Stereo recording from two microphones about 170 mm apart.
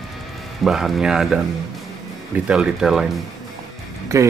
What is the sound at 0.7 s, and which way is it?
Speech, centre (ahead or behind).